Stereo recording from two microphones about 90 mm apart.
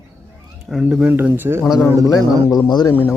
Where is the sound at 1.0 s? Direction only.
20° right (ahead or behind).